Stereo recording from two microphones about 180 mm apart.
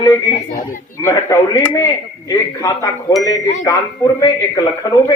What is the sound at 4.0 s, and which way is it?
Speech, 20° left (ahead or behind).